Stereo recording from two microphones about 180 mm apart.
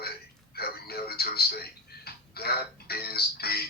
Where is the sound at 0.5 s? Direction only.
60° left (ahead or behind).